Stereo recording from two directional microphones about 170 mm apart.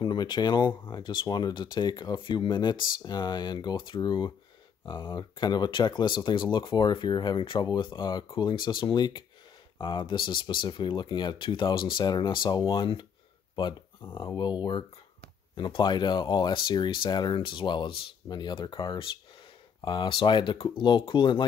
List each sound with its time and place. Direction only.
0.0 s speech: 25° left (ahead or behind)